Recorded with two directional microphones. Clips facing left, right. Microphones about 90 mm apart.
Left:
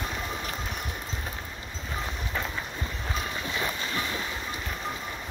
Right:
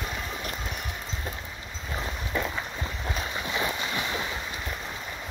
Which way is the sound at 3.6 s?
20° right (ahead or behind).